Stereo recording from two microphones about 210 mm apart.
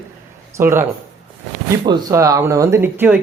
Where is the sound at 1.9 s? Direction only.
15° right (ahead or behind).